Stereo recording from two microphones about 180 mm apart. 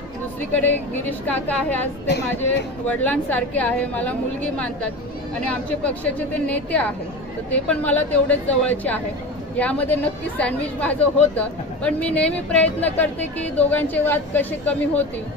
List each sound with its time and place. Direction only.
0.6 s a woman's voice: 10° left (ahead or behind)
2.0 s a woman's voice: 70° left (ahead or behind)
2.9 s a woman's voice: 10° left (ahead or behind)
5.5 s a woman's voice: 5° left (ahead or behind)